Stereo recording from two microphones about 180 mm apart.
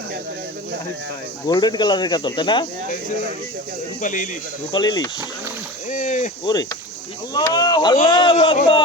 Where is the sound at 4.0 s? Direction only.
45° left (ahead or behind).